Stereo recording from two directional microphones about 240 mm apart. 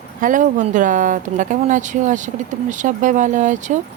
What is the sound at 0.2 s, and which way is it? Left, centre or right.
Speech, right.